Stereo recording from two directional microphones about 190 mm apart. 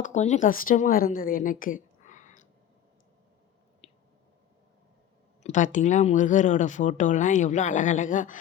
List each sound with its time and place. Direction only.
0.0 s a woman's voice: 40° left (ahead or behind)
3.8 s a sound: 35° left (ahead or behind)
5.4 s speech: 40° left (ahead or behind)